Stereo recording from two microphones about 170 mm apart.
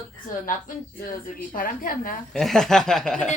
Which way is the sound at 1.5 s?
55° left (ahead or behind).